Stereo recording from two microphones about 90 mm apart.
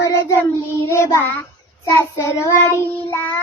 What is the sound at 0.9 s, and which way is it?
Child singing, 30° left (ahead or behind).